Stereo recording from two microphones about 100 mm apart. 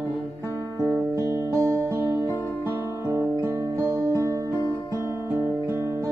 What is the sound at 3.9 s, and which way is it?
Music, 35° right (ahead or behind).